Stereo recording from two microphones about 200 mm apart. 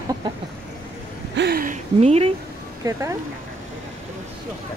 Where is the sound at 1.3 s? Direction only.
55° right (ahead or behind); by 2.3 s 30° right (ahead or behind).